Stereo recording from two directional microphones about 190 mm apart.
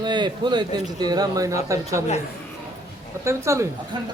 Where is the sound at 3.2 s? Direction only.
15° right (ahead or behind).